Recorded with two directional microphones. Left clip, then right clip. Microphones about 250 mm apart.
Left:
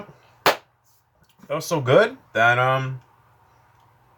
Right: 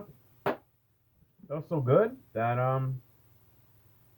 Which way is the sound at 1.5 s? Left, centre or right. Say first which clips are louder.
Left 8 dB; centre.